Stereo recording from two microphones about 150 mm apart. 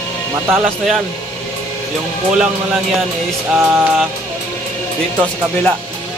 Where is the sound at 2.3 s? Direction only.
5° right (ahead or behind).